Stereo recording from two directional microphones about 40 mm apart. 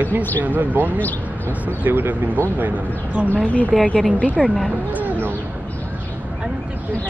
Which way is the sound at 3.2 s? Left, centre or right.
Left.